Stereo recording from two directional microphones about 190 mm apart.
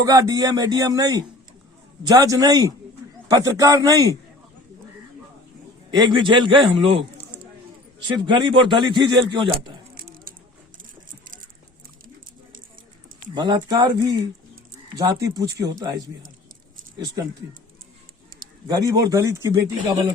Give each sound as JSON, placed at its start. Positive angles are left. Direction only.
{"t": 0.0, "sound": "a man's voice", "side_deg": -20}
{"t": 5.9, "sound": "a man's voice", "side_deg": -25}
{"t": 9.9, "sound": "a sound", "side_deg": -50}
{"t": 13.3, "sound": "a man's voice", "side_deg": -20}
{"t": 18.7, "sound": "a man's voice", "side_deg": -20}